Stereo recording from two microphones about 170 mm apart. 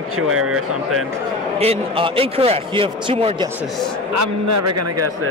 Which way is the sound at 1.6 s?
35° right (ahead or behind).